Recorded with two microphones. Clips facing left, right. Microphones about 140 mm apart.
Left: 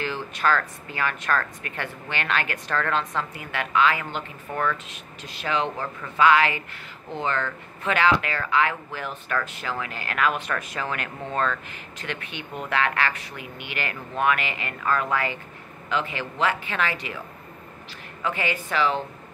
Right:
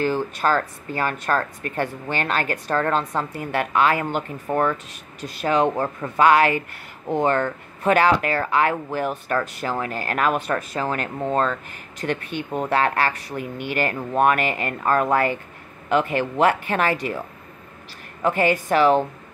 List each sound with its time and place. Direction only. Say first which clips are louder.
0.0 s speech: right 5 dB; 40° right (ahead or behind)
18.2 s speech: right 8 dB; 45° right (ahead or behind)